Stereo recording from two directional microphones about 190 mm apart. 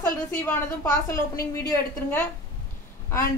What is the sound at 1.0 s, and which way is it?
A man's voice, 15° left (ahead or behind).